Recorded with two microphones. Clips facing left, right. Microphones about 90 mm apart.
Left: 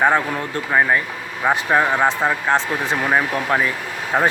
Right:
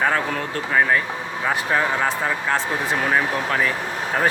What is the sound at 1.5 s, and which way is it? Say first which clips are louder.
Speech: left 4 dB; 25° left (ahead or behind).